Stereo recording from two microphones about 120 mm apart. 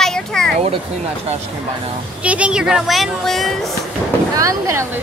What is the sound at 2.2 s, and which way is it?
Speech, 10° right (ahead or behind).